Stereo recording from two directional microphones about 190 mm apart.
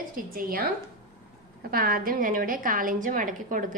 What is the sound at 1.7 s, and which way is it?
A woman's voice, 50° right (ahead or behind).